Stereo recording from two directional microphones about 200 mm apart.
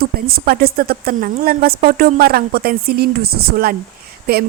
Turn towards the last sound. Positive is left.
turn(degrees=-50)  # may be behind; listen again after turning